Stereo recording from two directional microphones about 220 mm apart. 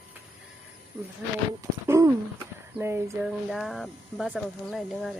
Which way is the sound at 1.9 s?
10° right (ahead or behind).